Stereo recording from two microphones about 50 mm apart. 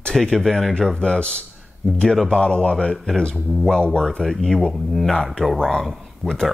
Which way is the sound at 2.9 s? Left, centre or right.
Centre.